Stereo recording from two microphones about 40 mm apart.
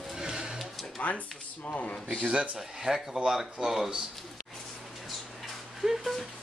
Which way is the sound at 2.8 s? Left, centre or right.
Centre.